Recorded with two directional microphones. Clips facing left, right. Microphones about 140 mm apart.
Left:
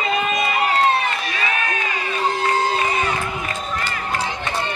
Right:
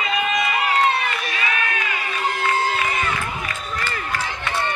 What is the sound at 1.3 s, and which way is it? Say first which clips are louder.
Crowd: left 1 dB; 35° left (ahead or behind).